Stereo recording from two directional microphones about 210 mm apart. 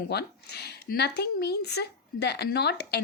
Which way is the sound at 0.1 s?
50° left (ahead or behind).